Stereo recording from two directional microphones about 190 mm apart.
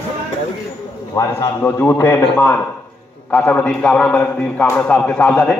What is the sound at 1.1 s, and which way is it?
A man's voice, 10° left (ahead or behind).